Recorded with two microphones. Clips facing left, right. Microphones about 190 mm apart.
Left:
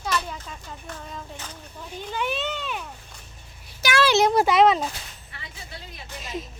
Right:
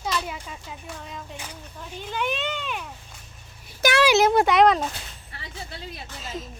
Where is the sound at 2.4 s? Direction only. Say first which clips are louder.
Even; 10° right (ahead or behind).